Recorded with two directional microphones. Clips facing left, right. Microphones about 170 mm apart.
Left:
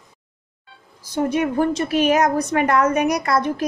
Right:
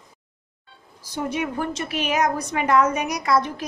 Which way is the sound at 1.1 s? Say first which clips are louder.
Left 7 dB; 50° left (ahead or behind).